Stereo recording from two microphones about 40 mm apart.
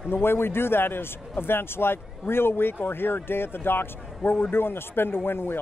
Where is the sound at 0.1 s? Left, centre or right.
Left.